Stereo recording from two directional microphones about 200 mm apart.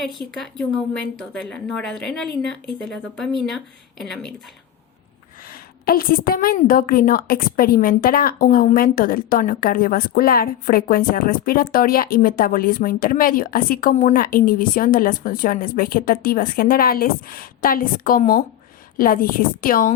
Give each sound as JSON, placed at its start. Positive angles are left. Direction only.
{"t": 0.0, "sound": "a woman's voice", "side_deg": 0}
{"t": 5.5, "sound": "a woman's voice", "side_deg": 45}